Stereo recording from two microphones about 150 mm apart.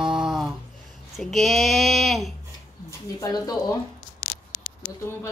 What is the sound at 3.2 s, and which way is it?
Speech, 25° left (ahead or behind).